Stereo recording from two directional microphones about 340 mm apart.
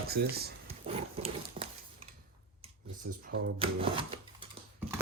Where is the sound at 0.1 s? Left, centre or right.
Right.